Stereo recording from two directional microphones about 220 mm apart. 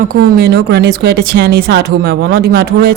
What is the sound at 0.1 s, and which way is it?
Speech, 45° right (ahead or behind).